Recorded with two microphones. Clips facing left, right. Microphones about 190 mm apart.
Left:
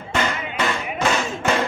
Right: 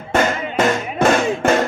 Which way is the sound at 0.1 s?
45° right (ahead or behind).